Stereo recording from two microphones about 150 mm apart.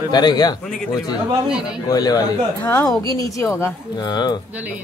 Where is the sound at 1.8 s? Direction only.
25° left (ahead or behind).